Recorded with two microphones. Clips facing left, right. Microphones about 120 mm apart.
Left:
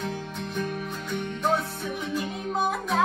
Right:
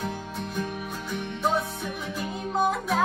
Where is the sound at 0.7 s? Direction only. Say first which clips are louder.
Left 1 dB; 5° right (ahead or behind).